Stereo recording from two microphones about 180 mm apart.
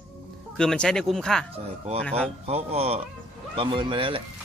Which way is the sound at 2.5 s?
35° right (ahead or behind).